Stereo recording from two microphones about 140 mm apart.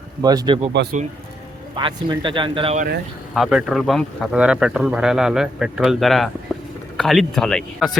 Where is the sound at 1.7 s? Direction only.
35° right (ahead or behind).